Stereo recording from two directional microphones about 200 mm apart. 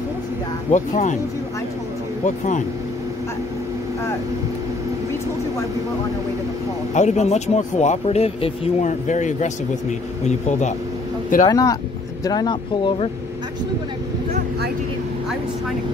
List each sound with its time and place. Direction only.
0.7 s speech: 35° left (ahead or behind)
2.2 s speech: 40° left (ahead or behind)
6.9 s speech: 35° left (ahead or behind)
11.4 s speech: 20° left (ahead or behind)